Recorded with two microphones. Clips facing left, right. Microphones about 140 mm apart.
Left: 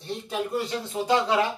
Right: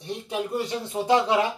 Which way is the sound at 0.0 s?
15° right (ahead or behind).